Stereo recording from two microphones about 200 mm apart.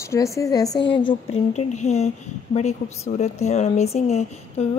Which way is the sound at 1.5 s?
35° left (ahead or behind).